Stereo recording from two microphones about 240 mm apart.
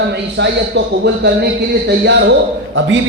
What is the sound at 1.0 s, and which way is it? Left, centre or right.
A man's voice, right.